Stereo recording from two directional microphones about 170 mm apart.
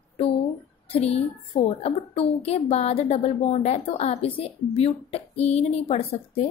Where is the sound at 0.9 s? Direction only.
35° left (ahead or behind).